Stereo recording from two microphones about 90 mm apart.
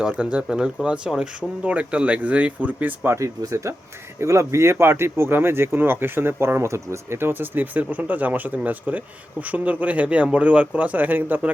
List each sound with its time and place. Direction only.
0.0 s speech: 10° right (ahead or behind)
3.2 s speech: 35° right (ahead or behind)